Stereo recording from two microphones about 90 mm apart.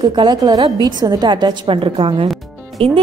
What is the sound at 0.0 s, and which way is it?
A woman's voice, 55° right (ahead or behind).